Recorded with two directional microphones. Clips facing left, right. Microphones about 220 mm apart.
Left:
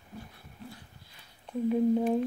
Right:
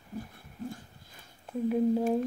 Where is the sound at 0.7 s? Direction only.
45° right (ahead or behind).